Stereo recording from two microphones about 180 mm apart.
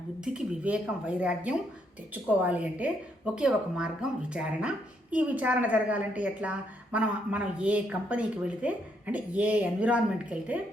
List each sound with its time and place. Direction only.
0.3 s a woman's voice: 5° right (ahead or behind)